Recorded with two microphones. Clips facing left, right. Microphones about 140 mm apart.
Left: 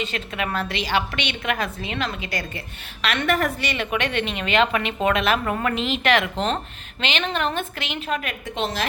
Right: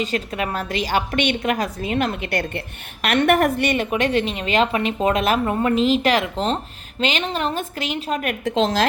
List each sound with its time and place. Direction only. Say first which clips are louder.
0.0 s a woman's voice: right 4 dB; 40° right (ahead or behind)
5.5 s a woman's voice: right 4 dB; 25° right (ahead or behind)
5.7 s a woman's voice: right 4 dB; 40° right (ahead or behind)
8.4 s speech: right 8 dB; 90° right